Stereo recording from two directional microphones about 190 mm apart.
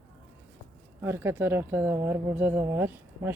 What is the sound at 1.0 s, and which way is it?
Speech, 15° right (ahead or behind).